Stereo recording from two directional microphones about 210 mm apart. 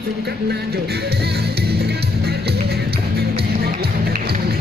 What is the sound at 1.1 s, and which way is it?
Music, 50° right (ahead or behind).